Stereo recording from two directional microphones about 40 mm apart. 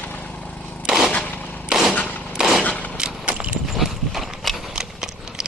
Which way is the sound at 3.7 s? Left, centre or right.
Centre.